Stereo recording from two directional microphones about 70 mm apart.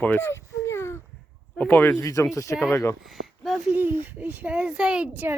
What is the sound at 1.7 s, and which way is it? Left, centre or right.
Speech, left.